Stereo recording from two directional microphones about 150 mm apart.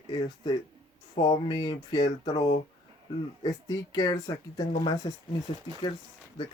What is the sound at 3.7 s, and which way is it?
Speech, 25° left (ahead or behind).